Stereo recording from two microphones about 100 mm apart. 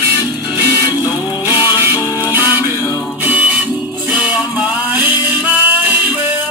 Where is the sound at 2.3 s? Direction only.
20° right (ahead or behind).